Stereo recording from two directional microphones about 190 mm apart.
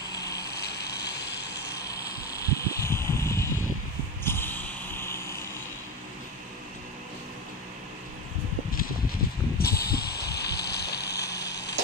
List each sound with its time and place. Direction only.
0.2 s vehicle: 60° left (ahead or behind)
1.9 s vehicle: 15° left (ahead or behind)
4.2 s snort: 10° left (ahead or behind)
9.6 s vehicle: 55° left (ahead or behind)